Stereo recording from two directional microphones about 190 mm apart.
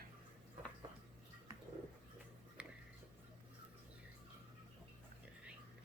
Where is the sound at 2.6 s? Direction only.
5° right (ahead or behind).